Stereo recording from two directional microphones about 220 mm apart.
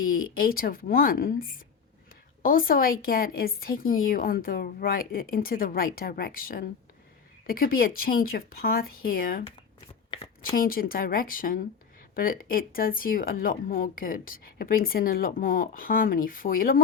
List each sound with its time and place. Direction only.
0.0 s speech: 40° left (ahead or behind)
10.1 s a sound: 20° left (ahead or behind)
10.5 s speech: 40° left (ahead or behind)